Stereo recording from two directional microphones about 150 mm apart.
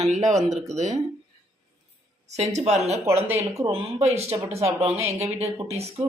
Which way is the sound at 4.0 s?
45° right (ahead or behind).